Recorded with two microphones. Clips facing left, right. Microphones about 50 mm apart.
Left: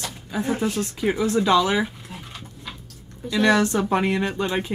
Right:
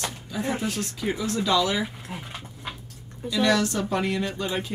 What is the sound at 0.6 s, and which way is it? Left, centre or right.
Speech, left.